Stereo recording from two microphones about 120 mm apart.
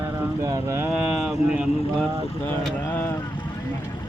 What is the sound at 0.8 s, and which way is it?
Speech, 10° right (ahead or behind).